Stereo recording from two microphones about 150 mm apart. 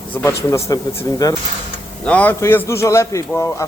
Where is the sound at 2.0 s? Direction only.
10° left (ahead or behind).